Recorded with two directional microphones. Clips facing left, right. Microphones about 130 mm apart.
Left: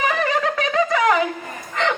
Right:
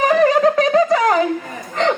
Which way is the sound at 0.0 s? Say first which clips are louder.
Right 8 dB; 40° right (ahead or behind).